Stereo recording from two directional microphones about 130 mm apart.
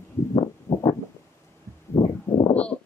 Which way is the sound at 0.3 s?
40° left (ahead or behind).